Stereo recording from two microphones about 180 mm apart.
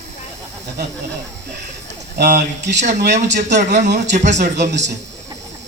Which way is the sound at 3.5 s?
40° right (ahead or behind).